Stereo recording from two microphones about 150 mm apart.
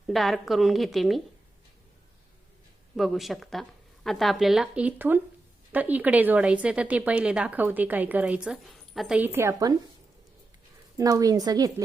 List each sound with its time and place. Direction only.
0.1 s speech: centre (ahead or behind)
2.9 s speech: centre (ahead or behind); by 9.7 s 20° right (ahead or behind)
10.9 s a woman's voice: 25° right (ahead or behind)